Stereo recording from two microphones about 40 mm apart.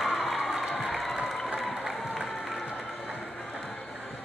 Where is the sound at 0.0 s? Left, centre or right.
Centre.